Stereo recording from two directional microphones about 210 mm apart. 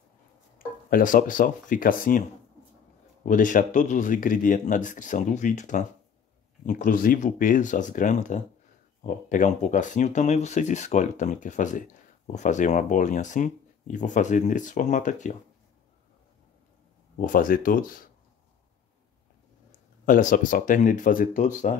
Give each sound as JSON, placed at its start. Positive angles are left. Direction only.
{"t": 0.8, "sound": "speech", "side_deg": 40}
{"t": 3.3, "sound": "speech", "side_deg": 40}
{"t": 17.2, "sound": "speech", "side_deg": 40}
{"t": 20.1, "sound": "speech", "side_deg": 40}